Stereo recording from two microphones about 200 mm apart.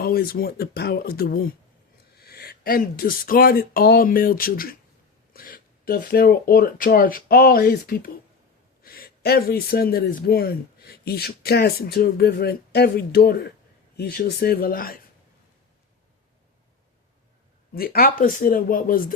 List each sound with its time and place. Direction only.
0.0 s speech: 50° left (ahead or behind)
17.7 s speech: 50° left (ahead or behind)